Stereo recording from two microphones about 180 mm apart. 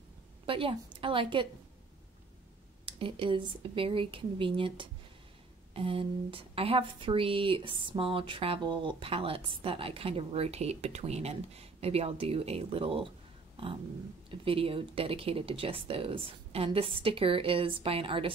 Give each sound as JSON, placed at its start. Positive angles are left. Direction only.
{"t": 0.5, "sound": "speech", "side_deg": -30}
{"t": 2.8, "sound": "a woman's voice", "side_deg": -30}
{"t": 14.3, "sound": "a woman's voice", "side_deg": -30}